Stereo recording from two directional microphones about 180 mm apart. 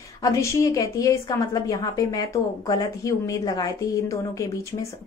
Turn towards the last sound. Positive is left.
turn(degrees=20)  # may be behind; listen again after turning